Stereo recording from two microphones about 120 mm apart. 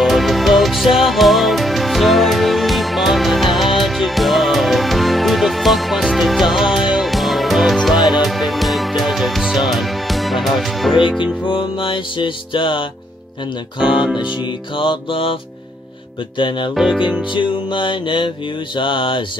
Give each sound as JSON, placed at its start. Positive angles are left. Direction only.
{"t": 0.0, "sound": "music", "side_deg": 0}
{"t": 11.4, "sound": "music", "side_deg": 45}
{"t": 13.7, "sound": "speech", "side_deg": -5}
{"t": 14.8, "sound": "music", "side_deg": 45}
{"t": 16.3, "sound": "music", "side_deg": 45}
{"t": 16.7, "sound": "speech", "side_deg": 0}
{"t": 17.3, "sound": "music", "side_deg": 45}